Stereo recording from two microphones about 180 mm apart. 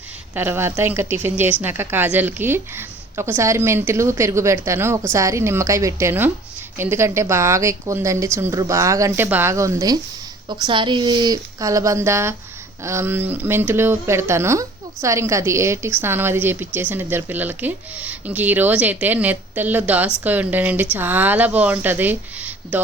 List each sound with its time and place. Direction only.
0.3 s speech: 10° right (ahead or behind)